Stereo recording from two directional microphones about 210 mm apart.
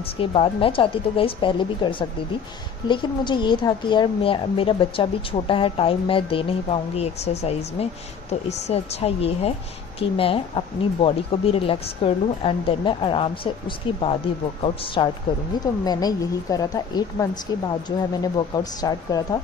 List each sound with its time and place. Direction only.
0.2 s a woman's voice: 25° left (ahead or behind)